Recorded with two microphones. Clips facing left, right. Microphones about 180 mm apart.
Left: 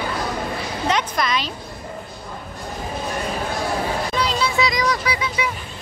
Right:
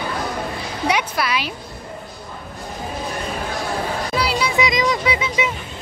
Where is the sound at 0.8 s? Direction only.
10° right (ahead or behind).